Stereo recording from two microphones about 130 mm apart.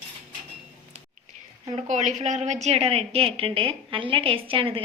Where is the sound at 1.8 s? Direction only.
60° right (ahead or behind).